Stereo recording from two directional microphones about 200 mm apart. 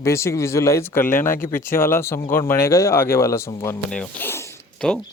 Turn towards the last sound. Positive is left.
turn(degrees=5)  # may be behind; listen again after turning